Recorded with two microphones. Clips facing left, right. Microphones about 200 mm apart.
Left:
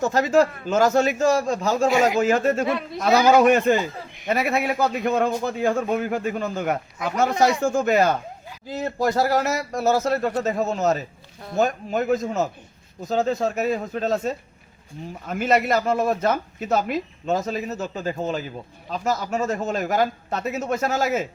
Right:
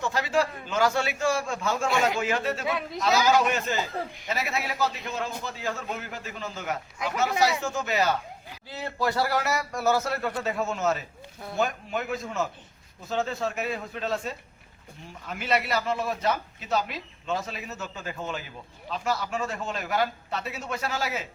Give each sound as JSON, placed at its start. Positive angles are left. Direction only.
{"t": 0.0, "sound": "a man's voice", "side_deg": 45}